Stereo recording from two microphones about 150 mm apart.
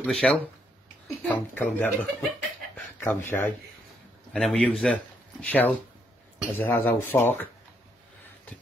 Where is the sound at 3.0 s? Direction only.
15° left (ahead or behind).